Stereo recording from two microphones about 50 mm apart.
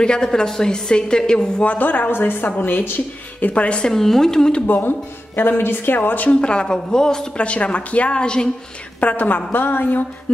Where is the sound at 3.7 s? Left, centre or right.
Centre.